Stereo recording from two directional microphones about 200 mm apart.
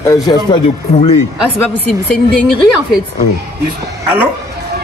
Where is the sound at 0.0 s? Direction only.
15° left (ahead or behind).